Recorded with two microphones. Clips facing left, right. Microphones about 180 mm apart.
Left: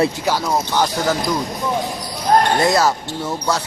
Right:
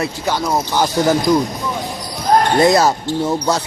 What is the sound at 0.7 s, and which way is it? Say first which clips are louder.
Speech: right 5 dB; 10° right (ahead or behind).